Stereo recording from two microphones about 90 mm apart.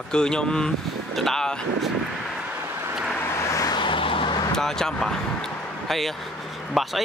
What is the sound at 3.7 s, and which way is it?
Vehicle, 65° left (ahead or behind).